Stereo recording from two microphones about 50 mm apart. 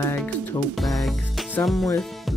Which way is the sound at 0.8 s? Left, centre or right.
Centre.